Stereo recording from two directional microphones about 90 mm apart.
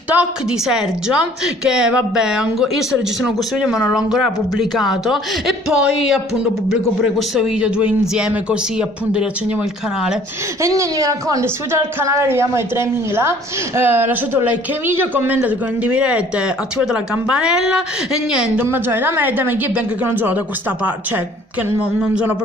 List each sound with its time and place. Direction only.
0.1 s a woman's voice: 10° right (ahead or behind)
10.6 s a woman's voice: 35° right (ahead or behind)
11.4 s a woman's voice: 30° right (ahead or behind); by 17.8 s 10° right (ahead or behind)
18.6 s a woman's voice: 25° right (ahead or behind)